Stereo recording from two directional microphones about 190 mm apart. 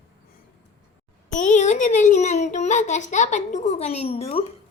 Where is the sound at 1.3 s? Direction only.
40° left (ahead or behind).